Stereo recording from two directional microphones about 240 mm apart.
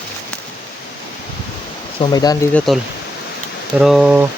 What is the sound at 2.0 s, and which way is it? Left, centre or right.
Speech, centre.